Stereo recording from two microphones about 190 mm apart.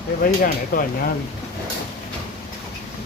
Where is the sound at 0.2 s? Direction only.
50° left (ahead or behind).